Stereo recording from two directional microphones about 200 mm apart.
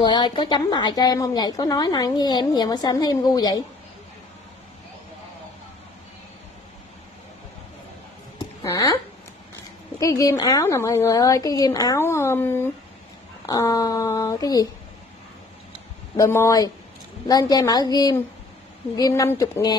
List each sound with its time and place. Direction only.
0.0 s a woman's voice: 25° left (ahead or behind)
9.9 s a woman's voice: 20° left (ahead or behind)
16.2 s a woman's voice: 15° left (ahead or behind)